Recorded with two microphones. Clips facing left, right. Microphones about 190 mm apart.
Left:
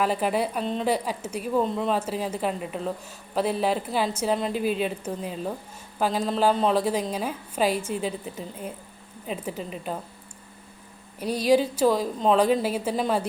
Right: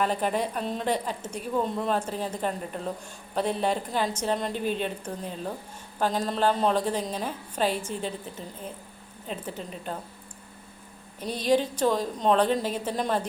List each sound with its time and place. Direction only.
0.0 s a woman's voice: 5° left (ahead or behind)
0.6 s a woman's voice: 5° right (ahead or behind)
0.9 s a woman's voice: 10° left (ahead or behind)
11.2 s a woman's voice: 10° left (ahead or behind)